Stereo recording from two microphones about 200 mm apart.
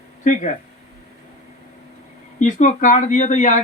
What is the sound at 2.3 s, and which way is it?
A man's voice, 40° left (ahead or behind).